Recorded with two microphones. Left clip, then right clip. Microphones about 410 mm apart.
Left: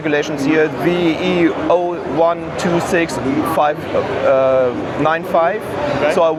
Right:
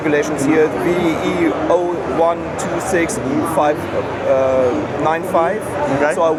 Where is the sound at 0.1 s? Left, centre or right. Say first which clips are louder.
Even; left.